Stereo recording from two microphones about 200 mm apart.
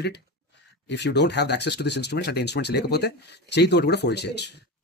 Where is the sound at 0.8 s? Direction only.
60° left (ahead or behind).